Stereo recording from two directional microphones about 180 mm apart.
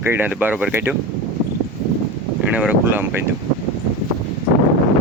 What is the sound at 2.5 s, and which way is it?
Speech, 10° right (ahead or behind).